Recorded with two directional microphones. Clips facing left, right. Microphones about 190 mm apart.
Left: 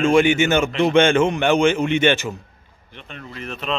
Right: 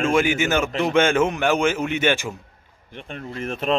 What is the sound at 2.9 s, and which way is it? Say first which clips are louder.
Speech: right 4 dB; 50° right (ahead or behind).